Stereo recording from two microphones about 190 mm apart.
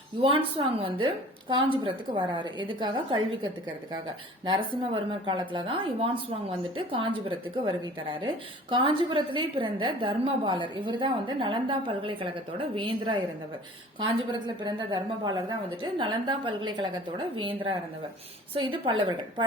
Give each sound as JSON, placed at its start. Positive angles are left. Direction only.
{"t": 0.2, "sound": "a woman's voice", "side_deg": -30}